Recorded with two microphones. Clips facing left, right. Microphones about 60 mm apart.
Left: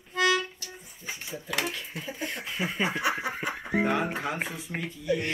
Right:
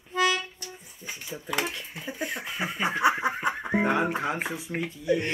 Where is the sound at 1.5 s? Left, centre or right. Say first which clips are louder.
Right 1 dB; centre.